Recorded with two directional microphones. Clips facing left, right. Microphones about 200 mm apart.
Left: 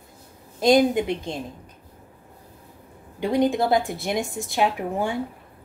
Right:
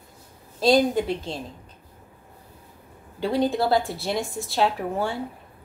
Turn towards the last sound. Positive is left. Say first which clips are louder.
# left 1 dB
turn(degrees=15)  # may be behind; listen again after turning